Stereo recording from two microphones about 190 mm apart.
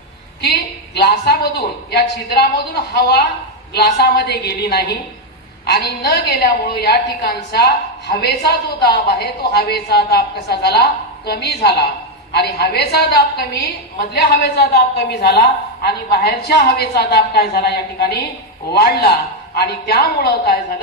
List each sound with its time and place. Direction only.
0.4 s a woman's voice: 60° left (ahead or behind)